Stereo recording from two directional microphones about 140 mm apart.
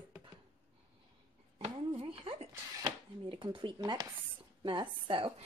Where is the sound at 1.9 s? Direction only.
40° right (ahead or behind).